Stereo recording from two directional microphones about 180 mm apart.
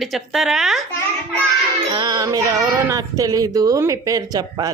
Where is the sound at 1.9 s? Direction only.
20° right (ahead or behind).